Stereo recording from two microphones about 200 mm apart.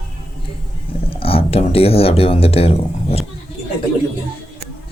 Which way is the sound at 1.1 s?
30° left (ahead or behind).